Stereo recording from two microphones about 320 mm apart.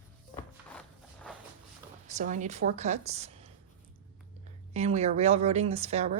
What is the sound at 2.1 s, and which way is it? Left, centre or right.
Speech, right.